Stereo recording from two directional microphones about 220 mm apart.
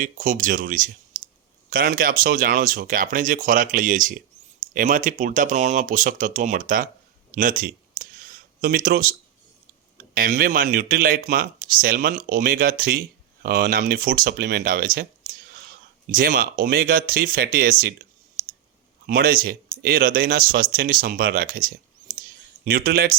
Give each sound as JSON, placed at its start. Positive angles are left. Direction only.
{"t": 0.0, "sound": "speech", "side_deg": -35}
{"t": 10.2, "sound": "speech", "side_deg": -40}
{"t": 16.1, "sound": "speech", "side_deg": -40}
{"t": 19.0, "sound": "speech", "side_deg": -40}
{"t": 22.1, "sound": "a sound", "side_deg": -40}